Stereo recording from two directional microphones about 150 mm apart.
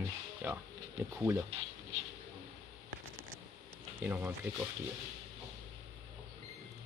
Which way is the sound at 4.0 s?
15° right (ahead or behind).